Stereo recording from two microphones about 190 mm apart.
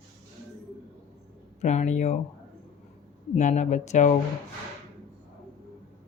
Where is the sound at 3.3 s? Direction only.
40° left (ahead or behind).